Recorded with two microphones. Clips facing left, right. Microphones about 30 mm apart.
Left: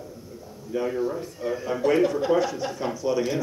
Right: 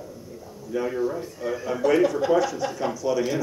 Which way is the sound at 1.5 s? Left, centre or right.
Centre.